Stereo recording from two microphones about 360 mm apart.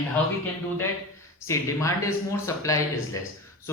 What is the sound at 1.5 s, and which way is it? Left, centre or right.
Speech, centre.